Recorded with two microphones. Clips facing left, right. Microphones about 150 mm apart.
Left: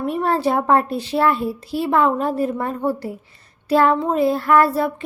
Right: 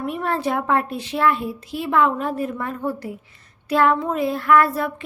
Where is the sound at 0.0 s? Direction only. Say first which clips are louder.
Left 4 dB; 35° left (ahead or behind).